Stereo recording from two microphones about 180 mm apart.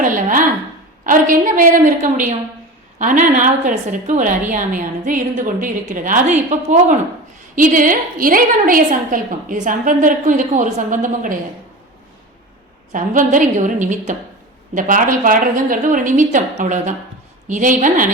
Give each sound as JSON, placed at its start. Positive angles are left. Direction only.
{"t": 0.0, "sound": "a sound", "side_deg": -45}
{"t": 1.0, "sound": "a woman's voice", "side_deg": -50}
{"t": 12.9, "sound": "a woman's voice", "side_deg": -45}